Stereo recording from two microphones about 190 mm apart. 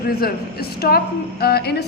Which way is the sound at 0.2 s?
55° left (ahead or behind).